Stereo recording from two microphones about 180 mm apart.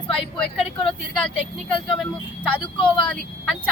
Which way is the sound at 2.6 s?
25° left (ahead or behind).